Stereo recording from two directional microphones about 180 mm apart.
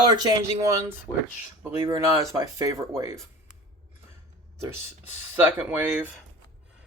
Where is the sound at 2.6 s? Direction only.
20° right (ahead or behind).